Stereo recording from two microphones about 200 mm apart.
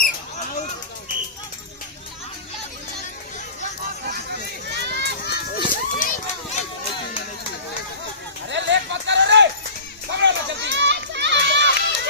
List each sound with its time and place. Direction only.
4.8 s run: 55° right (ahead or behind)
5.3 s run: 45° left (ahead or behind)
8.4 s a sound: 65° right (ahead or behind)